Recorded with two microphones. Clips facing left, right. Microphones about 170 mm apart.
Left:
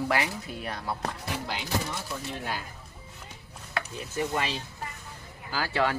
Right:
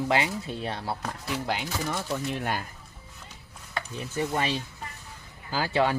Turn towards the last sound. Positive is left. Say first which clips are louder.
# right 3 dB
turn(degrees=-20)  # may be behind; listen again after turning